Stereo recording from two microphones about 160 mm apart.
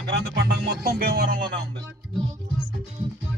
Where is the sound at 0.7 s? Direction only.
75° right (ahead or behind).